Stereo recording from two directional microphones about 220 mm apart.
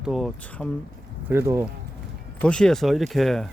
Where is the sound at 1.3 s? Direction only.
10° right (ahead or behind).